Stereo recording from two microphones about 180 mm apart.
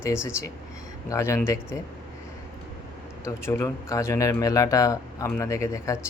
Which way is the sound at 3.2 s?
15° left (ahead or behind).